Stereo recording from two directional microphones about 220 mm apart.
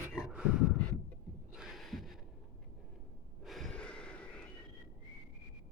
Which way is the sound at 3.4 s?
Centre (ahead or behind).